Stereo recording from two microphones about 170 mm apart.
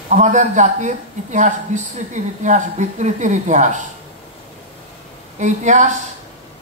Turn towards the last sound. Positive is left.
turn(degrees=-45)  # may be behind; listen again after turning